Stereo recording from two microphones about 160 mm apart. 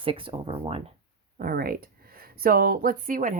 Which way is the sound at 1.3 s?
65° right (ahead or behind).